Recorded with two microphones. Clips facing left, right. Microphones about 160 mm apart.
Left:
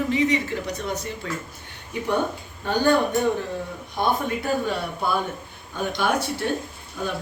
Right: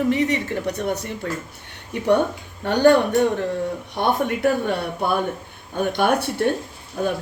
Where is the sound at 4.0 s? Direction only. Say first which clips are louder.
Right 4 dB; 65° right (ahead or behind).